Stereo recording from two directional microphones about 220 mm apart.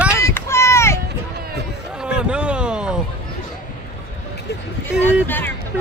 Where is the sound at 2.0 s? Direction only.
5° right (ahead or behind).